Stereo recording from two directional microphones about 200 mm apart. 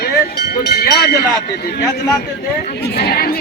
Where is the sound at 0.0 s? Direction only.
55° left (ahead or behind).